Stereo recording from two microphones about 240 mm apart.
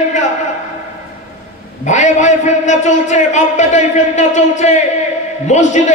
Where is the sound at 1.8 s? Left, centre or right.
Left.